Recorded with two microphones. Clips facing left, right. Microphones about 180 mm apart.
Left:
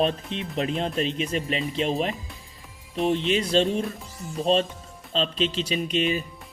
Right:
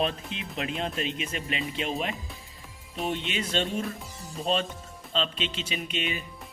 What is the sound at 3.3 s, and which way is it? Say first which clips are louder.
Speech: left 7 dB; 35° left (ahead or behind).